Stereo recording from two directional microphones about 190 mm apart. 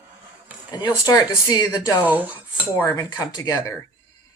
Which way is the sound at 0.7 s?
20° left (ahead or behind).